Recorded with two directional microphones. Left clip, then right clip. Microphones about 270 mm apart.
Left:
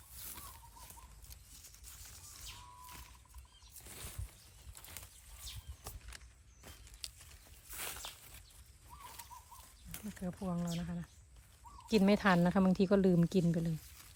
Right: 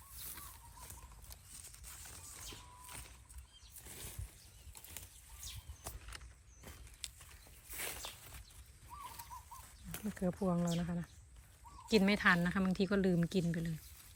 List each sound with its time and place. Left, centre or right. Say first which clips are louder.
1.9 s a sound: right 2 dB; right
3.8 s a sound: left 1 dB; centre
4.8 s bird flight: left 2 dB; centre
6.6 s walk: left 1 dB; centre
9.9 s speech: right 6 dB; centre
11.9 s speech: even; centre